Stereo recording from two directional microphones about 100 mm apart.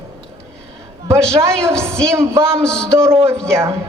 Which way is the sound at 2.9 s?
30° right (ahead or behind).